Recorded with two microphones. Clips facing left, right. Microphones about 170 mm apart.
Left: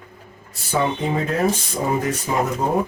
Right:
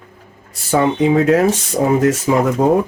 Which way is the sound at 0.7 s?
90° right.